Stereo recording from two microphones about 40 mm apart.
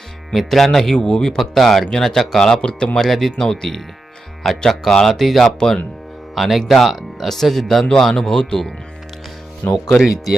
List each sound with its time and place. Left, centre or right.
0.3 s speech: centre
0.9 s speech: centre
1.4 s speech: centre
6.3 s speech: centre
8.1 s speech: centre
9.6 s speech: left